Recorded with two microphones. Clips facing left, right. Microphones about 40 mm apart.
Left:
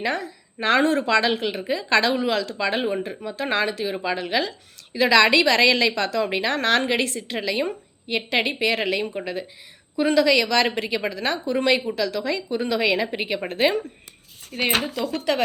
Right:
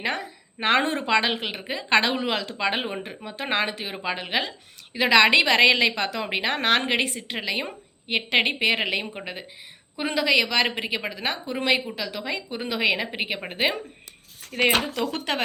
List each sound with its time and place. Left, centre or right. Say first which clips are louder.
0.0 s a woman's voice: left 2 dB; right
8.0 s a woman's voice: right 1 dB; right
14.5 s speech: right 1 dB; right
15.2 s a woman's voice: left 8 dB; right